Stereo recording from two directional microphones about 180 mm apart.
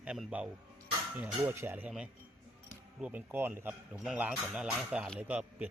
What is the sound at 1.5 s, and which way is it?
Speech, 10° right (ahead or behind).